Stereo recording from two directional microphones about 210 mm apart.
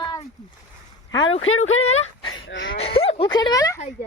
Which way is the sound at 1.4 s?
75° left (ahead or behind).